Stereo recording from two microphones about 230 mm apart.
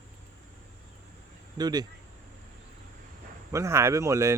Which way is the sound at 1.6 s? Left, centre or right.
Centre.